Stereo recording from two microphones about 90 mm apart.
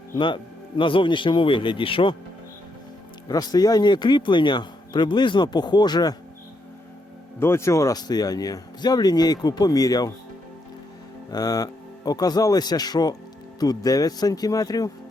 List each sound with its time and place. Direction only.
0.8 s speech: 70° left (ahead or behind)
3.2 s a man's voice: 45° left (ahead or behind)
7.3 s a man's voice: 30° left (ahead or behind); by 10.1 s 45° left (ahead or behind)
11.3 s a man's voice: 45° left (ahead or behind)